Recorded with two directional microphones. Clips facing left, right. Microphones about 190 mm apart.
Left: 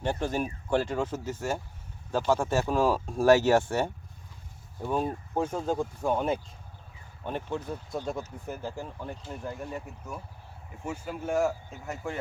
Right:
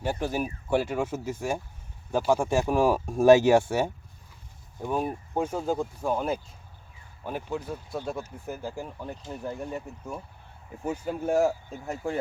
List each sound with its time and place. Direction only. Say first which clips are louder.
0.0 s speech: right 1 dB; 10° right (ahead or behind)
10.8 s speech: right 5 dB; 40° right (ahead or behind)